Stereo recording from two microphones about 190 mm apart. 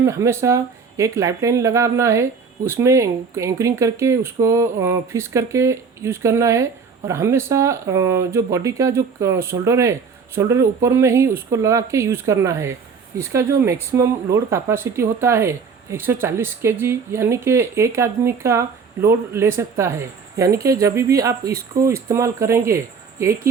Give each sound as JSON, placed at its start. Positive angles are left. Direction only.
{"t": 0.0, "sound": "speech", "side_deg": -15}